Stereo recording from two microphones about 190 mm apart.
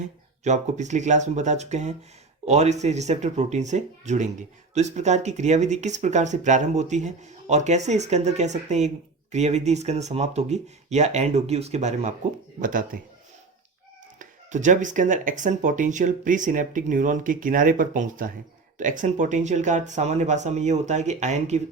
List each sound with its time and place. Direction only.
0.0 s speech: 40° right (ahead or behind)
14.2 s speech: 40° right (ahead or behind)